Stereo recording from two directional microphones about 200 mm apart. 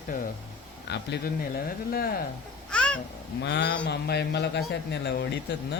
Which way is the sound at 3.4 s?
60° left (ahead or behind).